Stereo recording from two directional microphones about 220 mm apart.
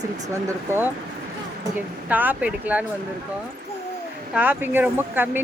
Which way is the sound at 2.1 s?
5° right (ahead or behind).